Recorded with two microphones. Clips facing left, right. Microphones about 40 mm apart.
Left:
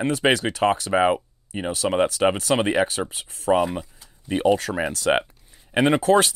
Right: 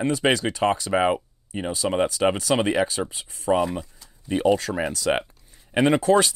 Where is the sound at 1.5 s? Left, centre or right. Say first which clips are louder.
Left 2 dB; left.